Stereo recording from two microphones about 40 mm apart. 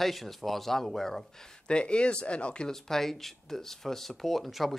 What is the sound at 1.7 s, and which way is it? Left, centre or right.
Speech, left.